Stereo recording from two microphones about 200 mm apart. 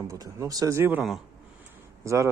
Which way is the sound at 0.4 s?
15° right (ahead or behind).